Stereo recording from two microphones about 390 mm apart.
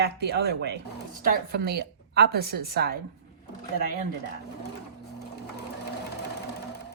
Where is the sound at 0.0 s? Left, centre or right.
Right.